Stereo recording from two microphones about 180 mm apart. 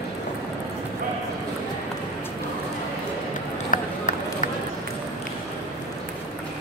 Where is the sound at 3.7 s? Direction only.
45° left (ahead or behind).